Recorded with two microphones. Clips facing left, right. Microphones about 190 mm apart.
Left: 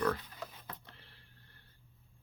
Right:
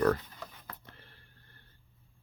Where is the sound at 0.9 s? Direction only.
50° right (ahead or behind).